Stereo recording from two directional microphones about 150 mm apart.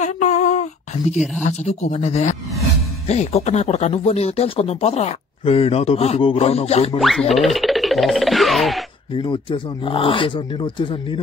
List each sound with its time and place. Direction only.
0.0 s a sound: 50° left (ahead or behind)
1.4 s speech: 50° left (ahead or behind)
7.0 s music: centre (ahead or behind)
9.1 s speech: 35° left (ahead or behind)